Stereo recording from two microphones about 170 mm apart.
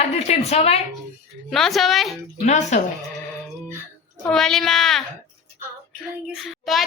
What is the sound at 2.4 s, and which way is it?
Speech, 40° left (ahead or behind).